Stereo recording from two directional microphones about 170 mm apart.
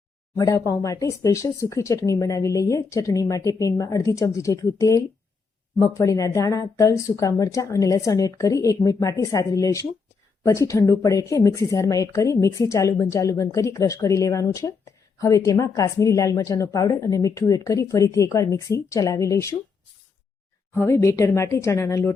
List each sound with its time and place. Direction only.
0.3 s speech: 20° left (ahead or behind)
20.7 s a woman's voice: 15° left (ahead or behind)